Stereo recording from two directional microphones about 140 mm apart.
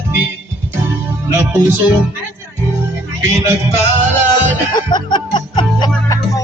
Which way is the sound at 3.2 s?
20° right (ahead or behind).